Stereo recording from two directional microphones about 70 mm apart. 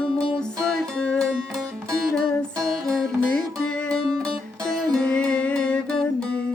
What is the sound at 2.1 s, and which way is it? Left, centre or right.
Music, right.